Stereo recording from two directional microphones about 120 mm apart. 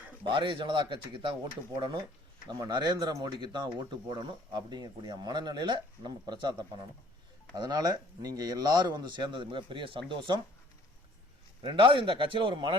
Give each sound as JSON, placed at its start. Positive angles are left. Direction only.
{"t": 0.3, "sound": "a man's voice", "side_deg": -40}
{"t": 2.5, "sound": "speech", "side_deg": -35}
{"t": 11.6, "sound": "a man's voice", "side_deg": -45}